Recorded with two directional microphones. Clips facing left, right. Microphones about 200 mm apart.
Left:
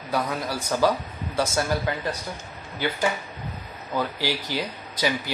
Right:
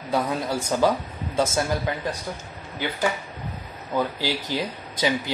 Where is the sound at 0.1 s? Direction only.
25° right (ahead or behind).